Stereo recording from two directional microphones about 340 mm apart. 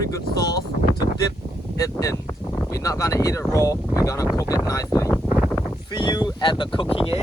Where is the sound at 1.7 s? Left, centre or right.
Centre.